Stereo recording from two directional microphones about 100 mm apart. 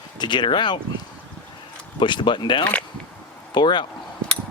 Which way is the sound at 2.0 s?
50° left (ahead or behind).